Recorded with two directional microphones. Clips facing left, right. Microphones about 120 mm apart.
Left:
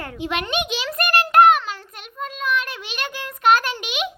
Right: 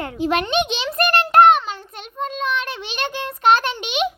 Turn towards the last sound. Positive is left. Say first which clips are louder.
# right 4 dB
turn(degrees=-30)  # may be behind; listen again after turning